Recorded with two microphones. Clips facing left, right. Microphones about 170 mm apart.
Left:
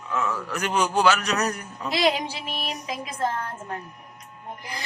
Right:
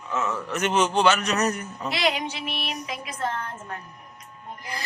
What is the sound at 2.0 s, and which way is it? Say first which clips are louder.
Speech: left 3 dB; 30° left (ahead or behind).